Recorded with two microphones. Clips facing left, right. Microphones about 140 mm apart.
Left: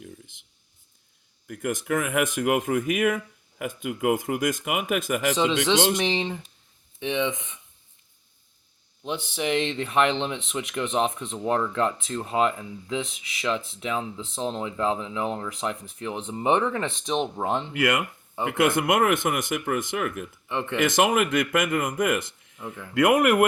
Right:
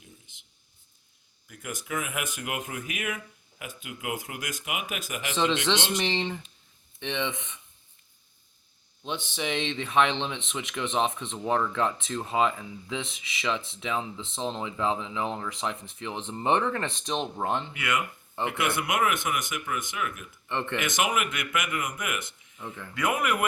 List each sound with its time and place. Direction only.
1.5 s speech: 55° left (ahead or behind)
6.1 s speech: 10° left (ahead or behind)
9.0 s speech: 5° left (ahead or behind)
17.7 s speech: 60° left (ahead or behind)
20.5 s speech: 5° left (ahead or behind)
20.8 s speech: 55° left (ahead or behind)
22.5 s speech: 5° left (ahead or behind)
23.0 s speech: 65° left (ahead or behind)